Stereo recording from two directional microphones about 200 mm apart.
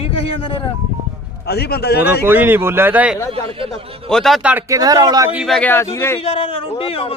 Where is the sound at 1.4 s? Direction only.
55° left (ahead or behind).